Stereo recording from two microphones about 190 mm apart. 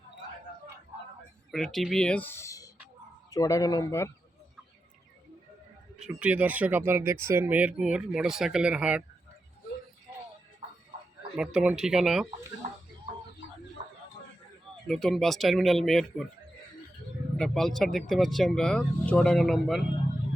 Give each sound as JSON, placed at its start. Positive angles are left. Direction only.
{"t": 1.5, "sound": "speech", "side_deg": 0}
{"t": 6.0, "sound": "speech", "side_deg": -5}
{"t": 11.3, "sound": "speech", "side_deg": -5}
{"t": 14.8, "sound": "speech", "side_deg": 0}
{"t": 17.3, "sound": "speech", "side_deg": 5}